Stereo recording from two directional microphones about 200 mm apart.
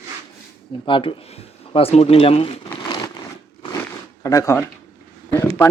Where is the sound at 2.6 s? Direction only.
20° left (ahead or behind).